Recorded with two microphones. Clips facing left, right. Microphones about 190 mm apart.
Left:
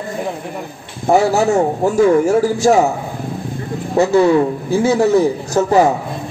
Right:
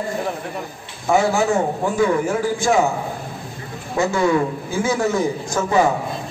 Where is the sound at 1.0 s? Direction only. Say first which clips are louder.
Left 4 dB; 35° left (ahead or behind).